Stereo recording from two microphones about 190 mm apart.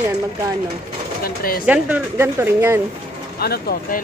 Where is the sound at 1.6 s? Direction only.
5° right (ahead or behind).